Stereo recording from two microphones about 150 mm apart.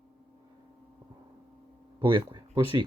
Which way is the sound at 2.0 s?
30° right (ahead or behind).